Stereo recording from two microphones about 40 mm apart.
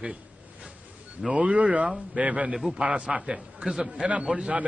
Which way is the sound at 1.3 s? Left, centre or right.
Right.